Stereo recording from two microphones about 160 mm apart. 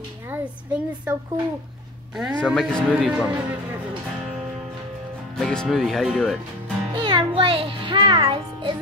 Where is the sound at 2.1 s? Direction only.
5° right (ahead or behind).